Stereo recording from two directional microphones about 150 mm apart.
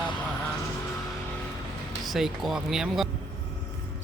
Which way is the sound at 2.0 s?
Centre (ahead or behind).